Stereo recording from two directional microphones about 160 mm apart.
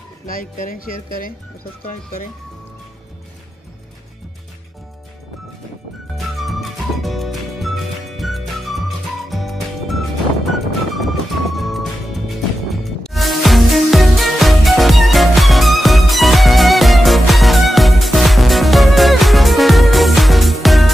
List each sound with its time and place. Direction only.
0.3 s speech: 60° left (ahead or behind)
6.1 s music: centre (ahead or behind)